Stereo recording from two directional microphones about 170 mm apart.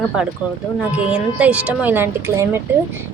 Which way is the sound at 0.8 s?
5° right (ahead or behind).